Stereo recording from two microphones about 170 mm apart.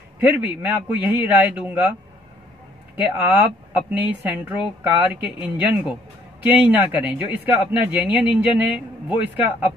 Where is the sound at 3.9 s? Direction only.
10° right (ahead or behind).